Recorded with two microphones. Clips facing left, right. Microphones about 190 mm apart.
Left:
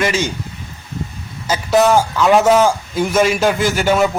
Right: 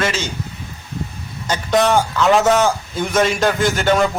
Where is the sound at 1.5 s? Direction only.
5° left (ahead or behind).